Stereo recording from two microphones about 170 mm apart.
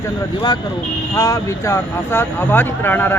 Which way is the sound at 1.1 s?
20° left (ahead or behind).